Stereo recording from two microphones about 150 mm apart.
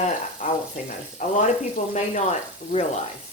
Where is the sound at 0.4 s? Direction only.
55° left (ahead or behind).